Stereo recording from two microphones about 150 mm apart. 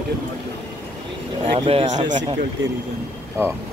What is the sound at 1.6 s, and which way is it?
Speech, 40° right (ahead or behind).